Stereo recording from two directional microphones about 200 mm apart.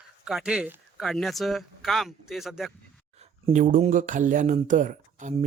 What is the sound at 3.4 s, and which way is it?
Speech, 40° right (ahead or behind).